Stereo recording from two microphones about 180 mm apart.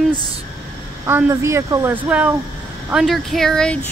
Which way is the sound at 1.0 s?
15° right (ahead or behind).